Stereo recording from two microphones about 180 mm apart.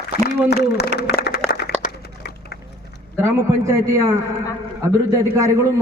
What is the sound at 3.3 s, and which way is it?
Speech, 15° right (ahead or behind).